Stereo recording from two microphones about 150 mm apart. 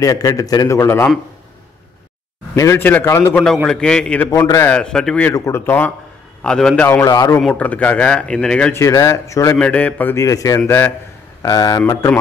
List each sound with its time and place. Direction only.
0.0 s a man's voice: 25° left (ahead or behind)
2.5 s a man's voice: 20° left (ahead or behind)
4.3 s a man's voice: 20° left (ahead or behind)
4.7 s a man's voice: 5° left (ahead or behind)
5.3 s a man's voice: 15° left (ahead or behind)
7.4 s a man's voice: 10° left (ahead or behind)
8.7 s a man's voice: 20° left (ahead or behind)
9.6 s a man's voice: 10° left (ahead or behind)
11.4 s a man's voice: 25° left (ahead or behind)